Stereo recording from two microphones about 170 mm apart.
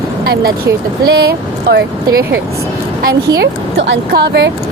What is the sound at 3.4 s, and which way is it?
Speech, 90° right.